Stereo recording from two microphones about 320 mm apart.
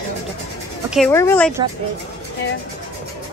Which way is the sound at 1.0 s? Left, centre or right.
Centre.